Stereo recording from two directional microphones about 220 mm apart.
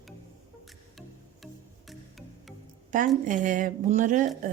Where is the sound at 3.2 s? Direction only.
35° right (ahead or behind).